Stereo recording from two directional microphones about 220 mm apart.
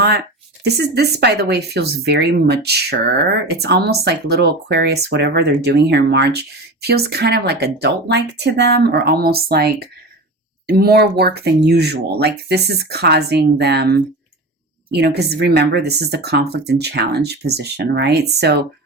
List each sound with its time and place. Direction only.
0.6 s speech: 45° right (ahead or behind)
10.7 s speech: 45° right (ahead or behind)